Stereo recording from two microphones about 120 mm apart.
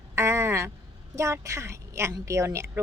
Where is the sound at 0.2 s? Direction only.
25° right (ahead or behind).